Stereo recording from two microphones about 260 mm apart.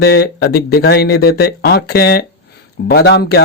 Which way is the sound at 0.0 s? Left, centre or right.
Left.